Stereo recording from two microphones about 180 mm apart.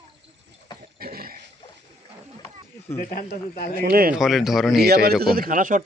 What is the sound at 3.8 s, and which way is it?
Speech, 55° right (ahead or behind).